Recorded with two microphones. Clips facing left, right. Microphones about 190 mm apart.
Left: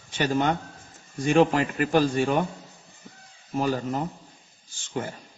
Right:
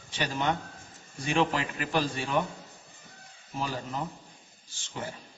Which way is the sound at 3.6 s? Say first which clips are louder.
Left 8 dB; 50° left (ahead or behind).